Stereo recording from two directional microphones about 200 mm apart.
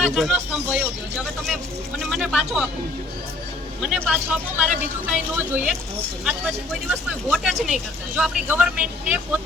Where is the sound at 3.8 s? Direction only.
5° right (ahead or behind).